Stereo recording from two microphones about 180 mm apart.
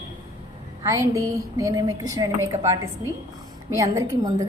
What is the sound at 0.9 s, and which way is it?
A woman's voice, 20° right (ahead or behind).